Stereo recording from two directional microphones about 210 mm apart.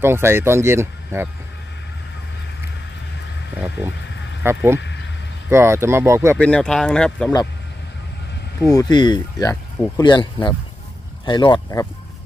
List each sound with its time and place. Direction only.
0.0 s speech: 10° right (ahead or behind)
3.5 s speech: 5° right (ahead or behind)
4.7 s a sound: 55° left (ahead or behind)
5.5 s speech: 10° right (ahead or behind)
6.3 s speech: 5° left (ahead or behind)
8.5 s speech: 15° left (ahead or behind)